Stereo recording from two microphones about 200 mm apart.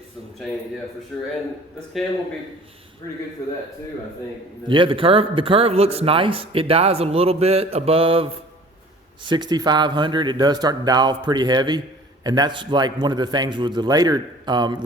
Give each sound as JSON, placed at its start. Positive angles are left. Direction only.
{"t": 1.1, "sound": "a man's voice", "side_deg": 0}
{"t": 4.7, "sound": "speech", "side_deg": -25}